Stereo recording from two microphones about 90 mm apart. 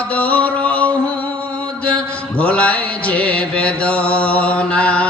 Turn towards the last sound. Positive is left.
turn(degrees=15)  # may be behind; listen again after turning